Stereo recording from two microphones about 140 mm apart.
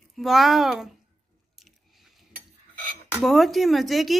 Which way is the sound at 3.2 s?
Centre (ahead or behind).